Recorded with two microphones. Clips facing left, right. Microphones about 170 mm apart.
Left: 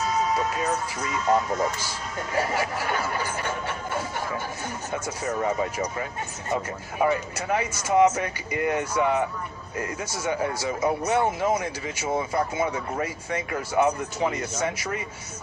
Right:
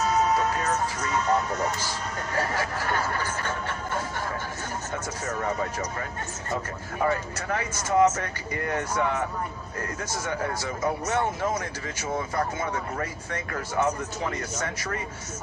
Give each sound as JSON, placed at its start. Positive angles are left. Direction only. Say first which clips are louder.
{"t": 0.1, "sound": "music", "louder": "right 1 dB", "side_deg": -65}
{"t": 2.3, "sound": "speech", "louder": "left 3 dB", "side_deg": 15}
{"t": 4.9, "sound": "speech", "louder": "left 5 dB", "side_deg": 15}
{"t": 7.0, "sound": "speech", "louder": "left 3 dB", "side_deg": 15}